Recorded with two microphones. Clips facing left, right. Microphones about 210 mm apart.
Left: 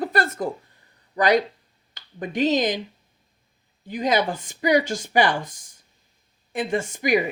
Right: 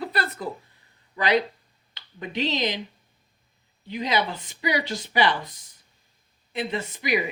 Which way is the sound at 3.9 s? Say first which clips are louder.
Left 4 dB; 45° left (ahead or behind).